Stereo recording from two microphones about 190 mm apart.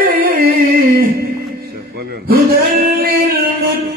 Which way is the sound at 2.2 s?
55° right (ahead or behind).